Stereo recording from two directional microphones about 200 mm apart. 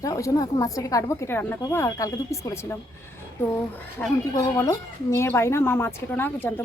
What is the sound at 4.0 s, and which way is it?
A woman's voice, 15° left (ahead or behind).